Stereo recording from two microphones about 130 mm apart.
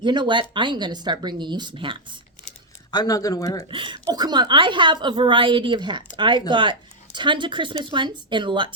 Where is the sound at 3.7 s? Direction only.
40° right (ahead or behind).